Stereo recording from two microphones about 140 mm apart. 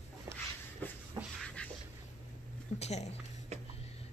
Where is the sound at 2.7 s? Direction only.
50° left (ahead or behind).